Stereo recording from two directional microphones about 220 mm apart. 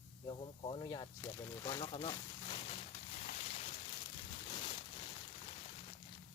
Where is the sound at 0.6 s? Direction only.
20° left (ahead or behind).